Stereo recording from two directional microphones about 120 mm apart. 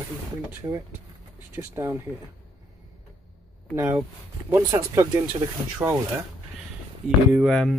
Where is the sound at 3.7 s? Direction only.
20° right (ahead or behind).